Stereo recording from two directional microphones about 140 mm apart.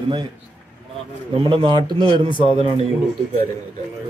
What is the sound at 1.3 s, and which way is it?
A man's voice, 40° right (ahead or behind).